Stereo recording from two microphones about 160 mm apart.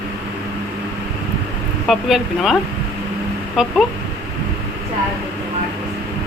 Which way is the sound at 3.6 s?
5° right (ahead or behind).